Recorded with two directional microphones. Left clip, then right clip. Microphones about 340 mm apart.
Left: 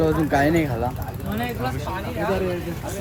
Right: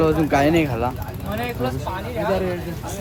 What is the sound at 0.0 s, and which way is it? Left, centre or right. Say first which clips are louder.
Speech: right 2 dB; centre.